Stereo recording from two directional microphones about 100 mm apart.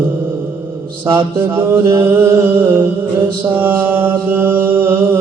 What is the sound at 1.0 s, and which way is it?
Mantra, 20° right (ahead or behind).